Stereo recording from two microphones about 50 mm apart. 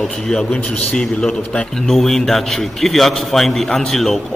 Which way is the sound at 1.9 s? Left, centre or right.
Centre.